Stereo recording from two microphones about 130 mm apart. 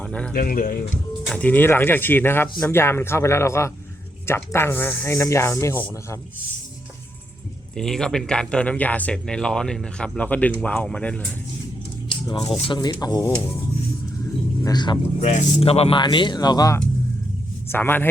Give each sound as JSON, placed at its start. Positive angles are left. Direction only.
{"t": 0.0, "sound": "speech", "side_deg": 10}
{"t": 0.4, "sound": "speech", "side_deg": 90}
{"t": 1.3, "sound": "speech", "side_deg": 10}
{"t": 7.8, "sound": "speech", "side_deg": 5}
{"t": 12.3, "sound": "speech", "side_deg": 45}
{"t": 14.6, "sound": "speech", "side_deg": 35}
{"t": 15.2, "sound": "speech", "side_deg": 60}
{"t": 16.0, "sound": "speech", "side_deg": 35}
{"t": 17.7, "sound": "speech", "side_deg": 15}